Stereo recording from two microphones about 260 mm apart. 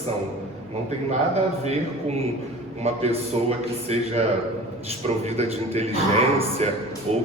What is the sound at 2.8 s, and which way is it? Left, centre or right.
A man's voice, right.